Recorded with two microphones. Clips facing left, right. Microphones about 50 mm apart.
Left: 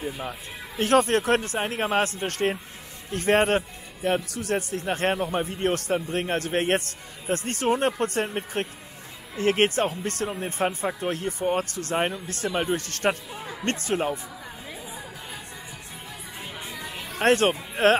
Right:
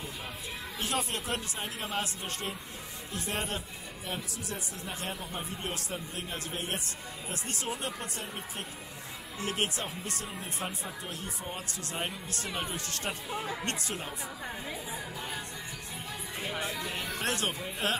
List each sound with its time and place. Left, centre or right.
0.7 s speech: left
13.3 s speech: centre
13.7 s speech: left
16.6 s music: centre
17.2 s speech: left